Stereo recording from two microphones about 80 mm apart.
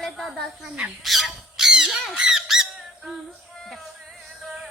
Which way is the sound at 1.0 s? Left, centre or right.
Centre.